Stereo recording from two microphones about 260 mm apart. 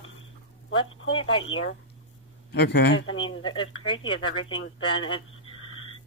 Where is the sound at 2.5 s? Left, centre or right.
Left.